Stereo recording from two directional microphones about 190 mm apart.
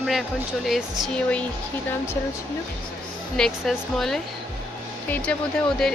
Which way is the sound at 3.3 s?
5° left (ahead or behind).